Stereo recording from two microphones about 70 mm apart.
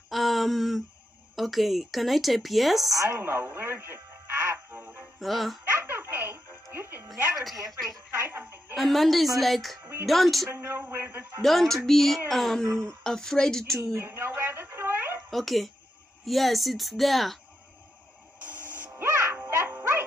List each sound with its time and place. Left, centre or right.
0.1 s a sound: centre
1.3 s speech: centre
3.0 s music: right
5.2 s speech: centre
5.7 s music: right
8.1 s a woman's voice: right
8.7 s speech: centre
10.5 s a man's voice: right
11.4 s speech: centre
13.9 s a sound: right
15.2 s speech: centre
18.4 s a sound: right
19.0 s music: right